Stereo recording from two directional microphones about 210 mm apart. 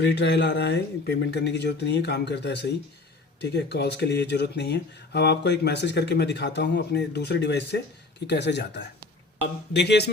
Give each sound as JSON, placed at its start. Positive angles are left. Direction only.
{"t": 0.0, "sound": "speech", "side_deg": 55}